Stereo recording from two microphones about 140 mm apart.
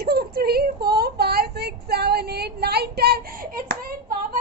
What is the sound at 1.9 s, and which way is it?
Child singing, 90° right.